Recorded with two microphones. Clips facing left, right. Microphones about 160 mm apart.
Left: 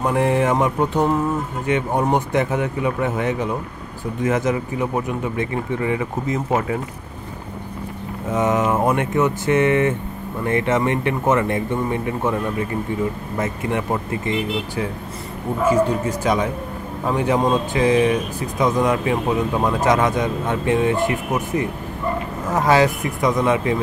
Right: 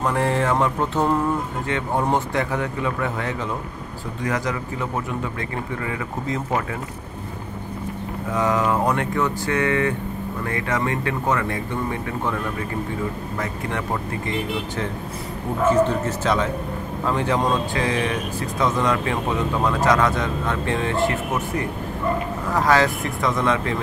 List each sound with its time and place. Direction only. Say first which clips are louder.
0.0 s speech: left 3 dB; 20° left (ahead or behind)
8.3 s speech: left 2 dB; 20° left (ahead or behind)
13.4 s speech: left 6 dB; 20° left (ahead or behind)